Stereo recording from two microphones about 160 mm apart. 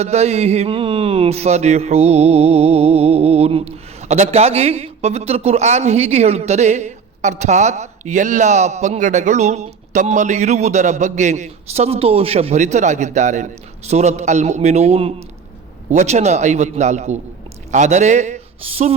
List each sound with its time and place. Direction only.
0.0 s speech: 40° right (ahead or behind)